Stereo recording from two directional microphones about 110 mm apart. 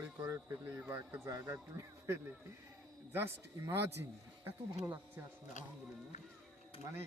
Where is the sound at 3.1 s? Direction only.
25° right (ahead or behind).